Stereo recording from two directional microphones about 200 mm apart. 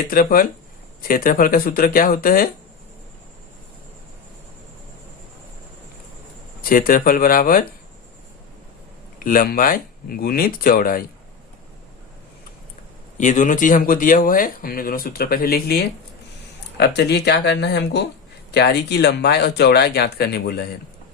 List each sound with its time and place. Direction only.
0.1 s speech: 45° left (ahead or behind)
6.6 s speech: 45° left (ahead or behind)
9.1 s speech: 45° left (ahead or behind)
13.1 s speech: 40° left (ahead or behind)